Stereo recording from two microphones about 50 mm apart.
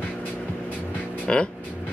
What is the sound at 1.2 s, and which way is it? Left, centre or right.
Music, centre.